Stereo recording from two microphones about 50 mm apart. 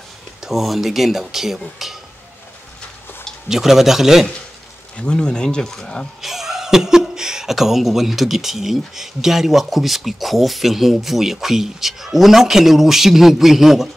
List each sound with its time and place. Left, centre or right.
0.4 s speech: centre
3.4 s speech: centre
4.9 s speech: centre
6.2 s speech: centre